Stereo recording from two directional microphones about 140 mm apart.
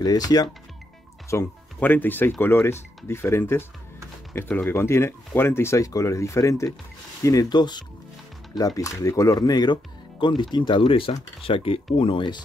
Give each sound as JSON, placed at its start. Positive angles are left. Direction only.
{"t": 0.0, "sound": "speech", "side_deg": 25}
{"t": 1.3, "sound": "speech", "side_deg": 15}